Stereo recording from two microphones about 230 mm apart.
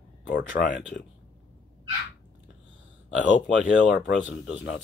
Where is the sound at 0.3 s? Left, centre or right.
Left.